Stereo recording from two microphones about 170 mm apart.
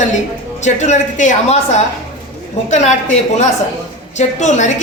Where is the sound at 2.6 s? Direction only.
45° left (ahead or behind).